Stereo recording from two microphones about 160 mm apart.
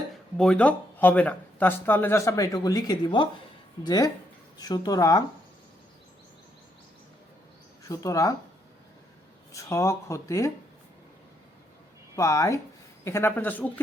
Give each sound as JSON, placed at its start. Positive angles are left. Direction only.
{"t": 0.3, "sound": "speech", "side_deg": 5}
{"t": 7.9, "sound": "speech", "side_deg": 20}
{"t": 9.5, "sound": "speech", "side_deg": 20}
{"t": 12.1, "sound": "speech", "side_deg": 20}